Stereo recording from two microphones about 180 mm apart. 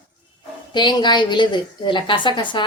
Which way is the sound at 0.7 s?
25° left (ahead or behind).